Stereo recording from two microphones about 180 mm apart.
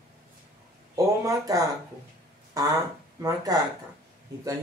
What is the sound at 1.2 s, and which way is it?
Speech, 20° right (ahead or behind).